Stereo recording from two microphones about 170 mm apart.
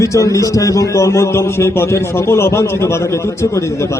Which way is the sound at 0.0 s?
20° left (ahead or behind).